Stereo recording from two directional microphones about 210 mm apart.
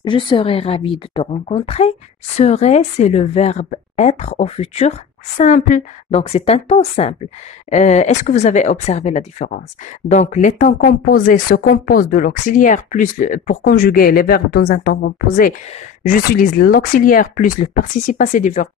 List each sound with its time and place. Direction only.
0.0 s speech: 20° left (ahead or behind)